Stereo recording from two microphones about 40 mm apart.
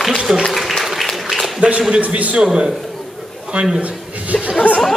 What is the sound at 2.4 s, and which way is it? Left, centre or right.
Speech, centre.